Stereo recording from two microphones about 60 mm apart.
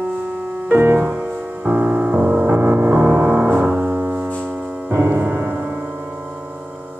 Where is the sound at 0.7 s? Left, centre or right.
Right.